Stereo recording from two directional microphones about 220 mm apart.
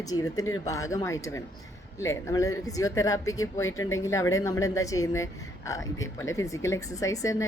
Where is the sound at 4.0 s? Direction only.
15° left (ahead or behind).